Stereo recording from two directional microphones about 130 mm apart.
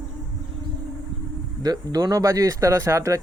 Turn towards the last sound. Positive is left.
turn(degrees=-25)  # may be behind; listen again after turning